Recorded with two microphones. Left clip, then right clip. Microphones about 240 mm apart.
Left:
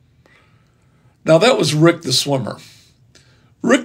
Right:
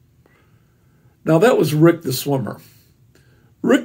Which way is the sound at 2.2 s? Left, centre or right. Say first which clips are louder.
Left 2 dB; left.